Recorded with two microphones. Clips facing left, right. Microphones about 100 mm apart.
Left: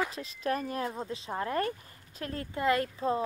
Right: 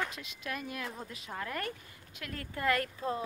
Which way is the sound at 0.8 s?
25° left (ahead or behind).